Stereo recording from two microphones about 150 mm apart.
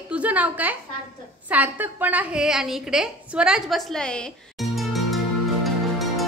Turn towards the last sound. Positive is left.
turn(degrees=0)  # may be behind; listen again after turning